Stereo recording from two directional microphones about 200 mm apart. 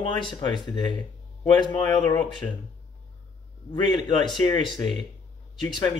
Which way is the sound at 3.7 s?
25° left (ahead or behind).